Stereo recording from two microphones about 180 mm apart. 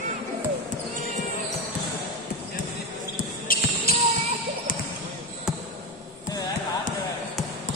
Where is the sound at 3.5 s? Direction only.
55° left (ahead or behind).